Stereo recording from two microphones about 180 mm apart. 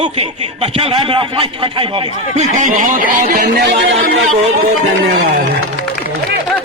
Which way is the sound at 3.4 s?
70° right (ahead or behind).